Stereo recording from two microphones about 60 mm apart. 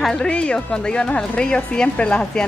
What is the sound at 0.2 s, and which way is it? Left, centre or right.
Speech, centre.